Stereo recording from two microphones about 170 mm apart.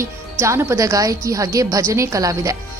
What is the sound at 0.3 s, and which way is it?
Speech, 15° right (ahead or behind).